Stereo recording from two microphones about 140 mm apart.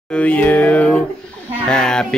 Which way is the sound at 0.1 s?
10° left (ahead or behind).